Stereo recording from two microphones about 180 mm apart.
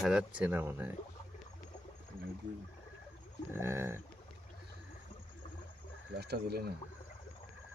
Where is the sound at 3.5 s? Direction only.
15° right (ahead or behind).